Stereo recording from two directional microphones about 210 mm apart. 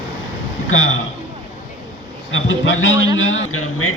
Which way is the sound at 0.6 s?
70° left (ahead or behind).